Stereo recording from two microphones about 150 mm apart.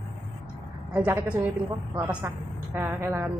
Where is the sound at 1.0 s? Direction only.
10° right (ahead or behind).